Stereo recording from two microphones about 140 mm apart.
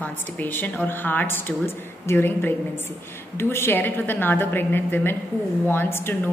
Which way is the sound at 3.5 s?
15° left (ahead or behind).